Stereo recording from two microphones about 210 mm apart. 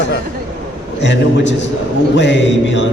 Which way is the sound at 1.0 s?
60° left (ahead or behind).